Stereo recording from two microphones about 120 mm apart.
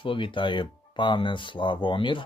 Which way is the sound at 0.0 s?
45° left (ahead or behind).